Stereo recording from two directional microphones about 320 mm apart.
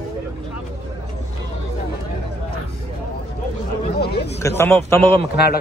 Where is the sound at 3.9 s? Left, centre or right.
Left.